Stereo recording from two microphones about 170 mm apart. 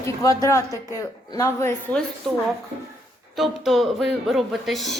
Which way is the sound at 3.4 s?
Centre (ahead or behind).